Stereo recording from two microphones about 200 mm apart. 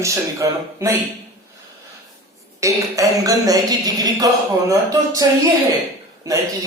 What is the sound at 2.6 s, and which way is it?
Speech, 15° right (ahead or behind).